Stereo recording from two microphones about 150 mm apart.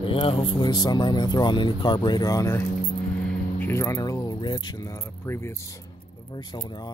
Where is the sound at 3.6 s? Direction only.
15° left (ahead or behind).